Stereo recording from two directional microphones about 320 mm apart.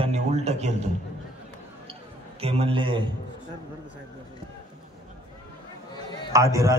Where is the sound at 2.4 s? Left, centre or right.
Centre.